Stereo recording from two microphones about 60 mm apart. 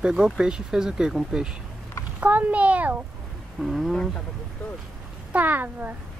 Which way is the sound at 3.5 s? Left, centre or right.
Centre.